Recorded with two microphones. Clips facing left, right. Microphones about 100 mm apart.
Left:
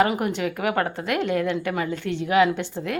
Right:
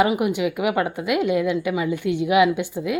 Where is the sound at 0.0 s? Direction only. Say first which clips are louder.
Right 2 dB; 10° right (ahead or behind).